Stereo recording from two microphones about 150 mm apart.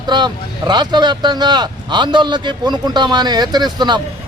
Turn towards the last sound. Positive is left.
turn(degrees=-30)  # may be behind; listen again after turning